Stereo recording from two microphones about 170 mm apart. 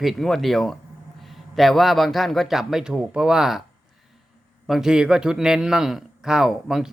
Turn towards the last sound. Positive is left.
turn(degrees=0)  # may be behind; listen again after turning